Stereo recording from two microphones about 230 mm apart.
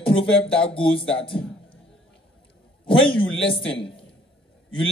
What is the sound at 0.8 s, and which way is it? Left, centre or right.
Speech, left.